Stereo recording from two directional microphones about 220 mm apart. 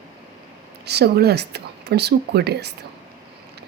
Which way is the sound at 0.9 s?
50° right (ahead or behind).